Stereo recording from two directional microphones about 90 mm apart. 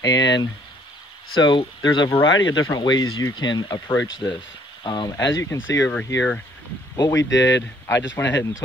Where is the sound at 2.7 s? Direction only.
50° left (ahead or behind).